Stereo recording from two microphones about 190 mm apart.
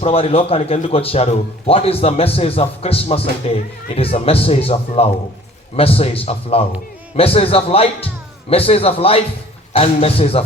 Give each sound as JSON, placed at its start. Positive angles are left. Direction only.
{"t": 0.0, "sound": "a man's voice", "side_deg": 30}